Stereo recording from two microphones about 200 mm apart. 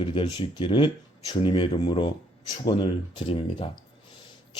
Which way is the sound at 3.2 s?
25° left (ahead or behind).